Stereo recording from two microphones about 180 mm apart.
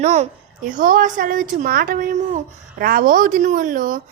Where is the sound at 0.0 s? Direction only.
40° right (ahead or behind).